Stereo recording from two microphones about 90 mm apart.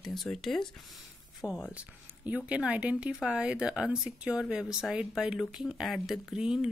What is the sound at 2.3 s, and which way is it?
Speech, 15° right (ahead or behind).